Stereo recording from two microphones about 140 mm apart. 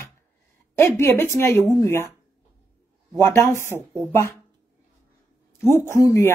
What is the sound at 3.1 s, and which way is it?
Speech, 15° left (ahead or behind).